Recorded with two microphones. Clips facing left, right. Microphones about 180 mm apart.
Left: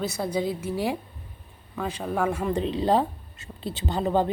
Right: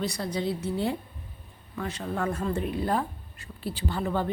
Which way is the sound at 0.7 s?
85° left.